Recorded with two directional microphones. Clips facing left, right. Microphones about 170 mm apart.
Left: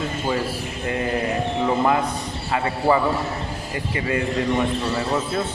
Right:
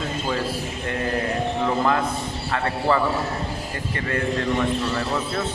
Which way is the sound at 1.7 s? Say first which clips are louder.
Left 3 dB; 15° left (ahead or behind).